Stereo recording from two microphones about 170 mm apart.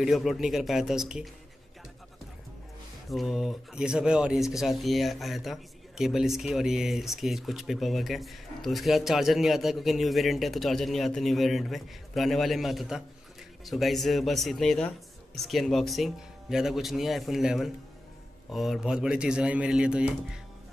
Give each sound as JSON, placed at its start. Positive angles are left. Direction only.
{"t": 0.0, "sound": "speech", "side_deg": 0}
{"t": 3.1, "sound": "speech", "side_deg": 0}